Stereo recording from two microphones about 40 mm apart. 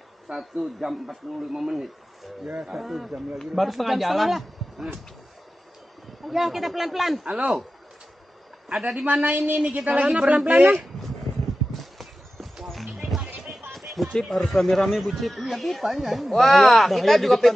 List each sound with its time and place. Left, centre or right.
0.3 s speech: centre
2.4 s speech: right
2.7 s speech: centre
6.2 s speech: centre
7.2 s speech: right
8.7 s speech: centre
9.0 s a woman's voice: right
9.7 s speech: right
10.4 s a woman's voice: right
11.4 s horse: centre
12.6 s music: centre
13.4 s a sound: centre
14.1 s speech: centre